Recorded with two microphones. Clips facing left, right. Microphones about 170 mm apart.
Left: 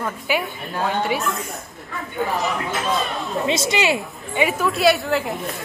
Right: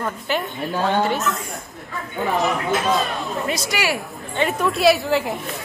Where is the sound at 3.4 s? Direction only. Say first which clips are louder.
Left 5 dB; 25° left (ahead or behind).